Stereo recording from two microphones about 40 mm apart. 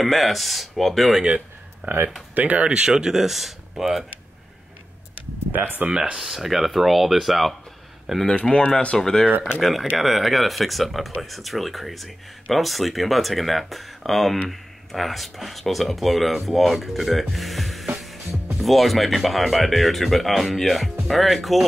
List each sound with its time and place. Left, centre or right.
0.0 s speech: centre
2.3 s speech: right
2.6 s speech: right
5.5 s speech: right
5.9 s speech: centre
6.2 s speech: centre
8.4 s speech: left
9.6 s speech: centre
17.9 s music: centre
18.6 s speech: centre